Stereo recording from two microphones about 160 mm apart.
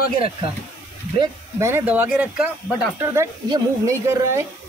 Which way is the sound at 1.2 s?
15° right (ahead or behind).